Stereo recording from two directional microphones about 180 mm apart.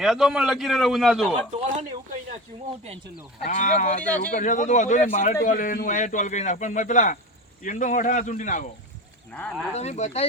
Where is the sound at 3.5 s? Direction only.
40° left (ahead or behind).